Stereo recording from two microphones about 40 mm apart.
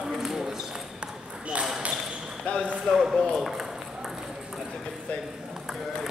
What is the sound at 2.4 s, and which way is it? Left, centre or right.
Speech, left.